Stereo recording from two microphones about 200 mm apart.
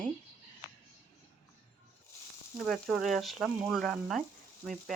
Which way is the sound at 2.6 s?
Centre (ahead or behind).